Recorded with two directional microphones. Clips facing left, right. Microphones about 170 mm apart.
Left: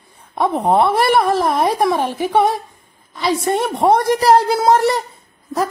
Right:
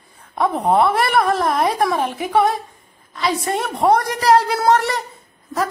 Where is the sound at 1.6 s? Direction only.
Centre (ahead or behind).